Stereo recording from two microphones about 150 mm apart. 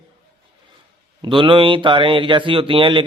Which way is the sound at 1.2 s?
35° right (ahead or behind).